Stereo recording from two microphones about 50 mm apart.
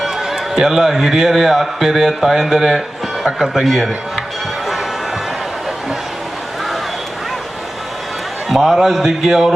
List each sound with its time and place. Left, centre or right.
0.0 s a man's voice: centre
8.4 s a man's voice: centre